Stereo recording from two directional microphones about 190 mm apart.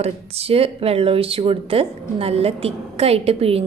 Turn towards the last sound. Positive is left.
turn(degrees=-30)  # may be behind; listen again after turning